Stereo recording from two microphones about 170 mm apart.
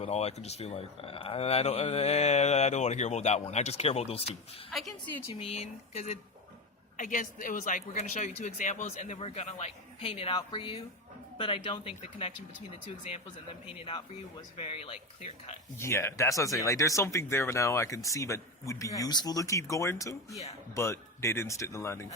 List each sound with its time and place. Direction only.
0.0 s speech: 40° left (ahead or behind)
4.7 s a woman's voice: centre (ahead or behind)
5.3 s speech: 35° left (ahead or behind)
6.9 s speech: 50° left (ahead or behind)
15.8 s speech: 15° left (ahead or behind)